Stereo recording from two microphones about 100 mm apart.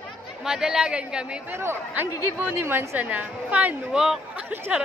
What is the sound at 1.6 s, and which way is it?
A woman's voice, 25° right (ahead or behind).